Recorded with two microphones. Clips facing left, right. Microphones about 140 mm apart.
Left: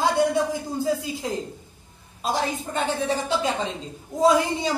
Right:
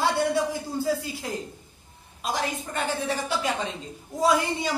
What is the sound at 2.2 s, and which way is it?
A woman's voice, 30° left (ahead or behind).